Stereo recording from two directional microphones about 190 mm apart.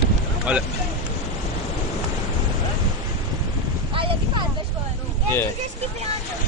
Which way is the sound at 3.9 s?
25° right (ahead or behind).